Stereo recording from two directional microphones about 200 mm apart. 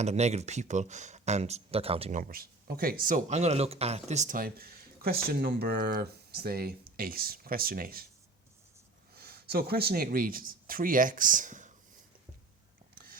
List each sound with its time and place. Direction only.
0.0 s speech: 35° right (ahead or behind)
9.1 s speech: 50° right (ahead or behind)